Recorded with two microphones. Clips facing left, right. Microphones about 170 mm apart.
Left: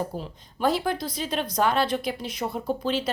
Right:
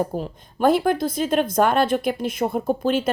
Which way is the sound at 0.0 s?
50° right (ahead or behind).